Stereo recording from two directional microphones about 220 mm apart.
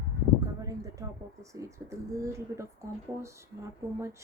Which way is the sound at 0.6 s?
15° right (ahead or behind).